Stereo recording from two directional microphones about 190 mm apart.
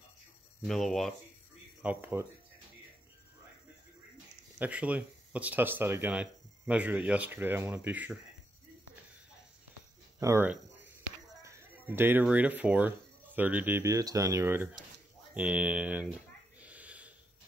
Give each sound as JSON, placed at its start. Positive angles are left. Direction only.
{"t": 0.7, "sound": "speech", "side_deg": 0}
{"t": 4.6, "sound": "speech", "side_deg": -5}
{"t": 10.2, "sound": "speech", "side_deg": -10}
{"t": 15.3, "sound": "a sound", "side_deg": -5}